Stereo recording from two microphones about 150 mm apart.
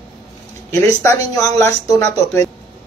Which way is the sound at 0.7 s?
20° left (ahead or behind).